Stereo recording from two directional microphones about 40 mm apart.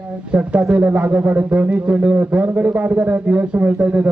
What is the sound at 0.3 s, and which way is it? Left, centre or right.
Speech, right.